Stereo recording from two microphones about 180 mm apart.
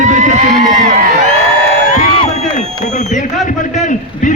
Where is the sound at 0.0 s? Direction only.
40° right (ahead or behind).